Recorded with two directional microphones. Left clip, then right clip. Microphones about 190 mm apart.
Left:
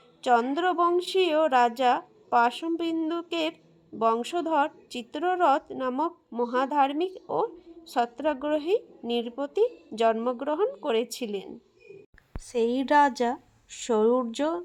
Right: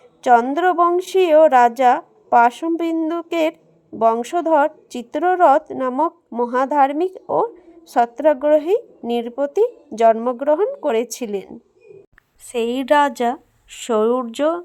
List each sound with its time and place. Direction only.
0.2 s a woman's voice: 35° right (ahead or behind)
12.5 s speech: 25° right (ahead or behind)